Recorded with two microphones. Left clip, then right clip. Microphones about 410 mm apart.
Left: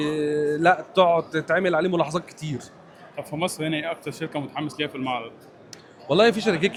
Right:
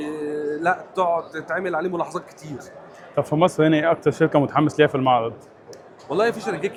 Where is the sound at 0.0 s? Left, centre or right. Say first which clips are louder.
Left 3 dB; left.